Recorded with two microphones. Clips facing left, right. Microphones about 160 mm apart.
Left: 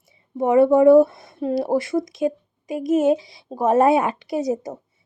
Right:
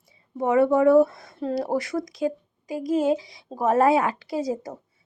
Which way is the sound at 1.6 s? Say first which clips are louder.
Left 5 dB; 25° left (ahead or behind).